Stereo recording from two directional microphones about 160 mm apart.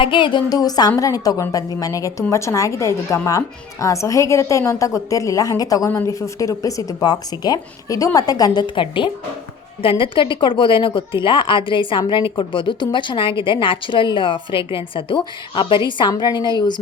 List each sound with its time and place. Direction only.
0.0 s a woman's voice: 30° left (ahead or behind)